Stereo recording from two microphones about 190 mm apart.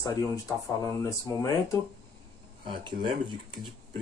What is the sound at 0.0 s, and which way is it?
Speech, 15° left (ahead or behind).